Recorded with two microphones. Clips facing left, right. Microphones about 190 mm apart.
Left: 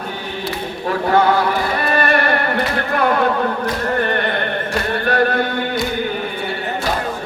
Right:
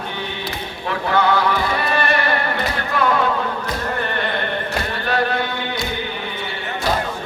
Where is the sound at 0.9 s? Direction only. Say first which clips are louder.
Left 4 dB; 40° left (ahead or behind).